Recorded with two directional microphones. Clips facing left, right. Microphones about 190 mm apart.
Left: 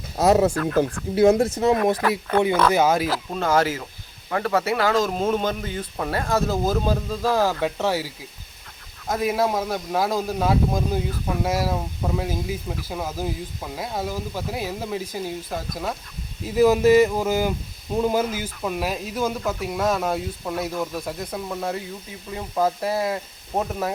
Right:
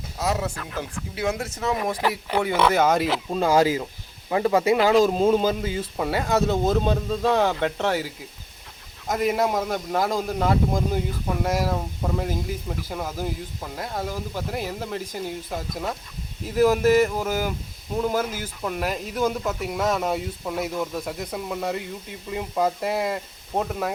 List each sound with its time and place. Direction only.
0.2 s speech: 45° left (ahead or behind)
1.1 s speech: 35° left (ahead or behind)
2.5 s speech: 5° right (ahead or behind)
2.7 s speech: 5° left (ahead or behind)
3.2 s speech: 15° right (ahead or behind); by 18.3 s 15° left (ahead or behind)
18.6 s speech: 5° left (ahead or behind)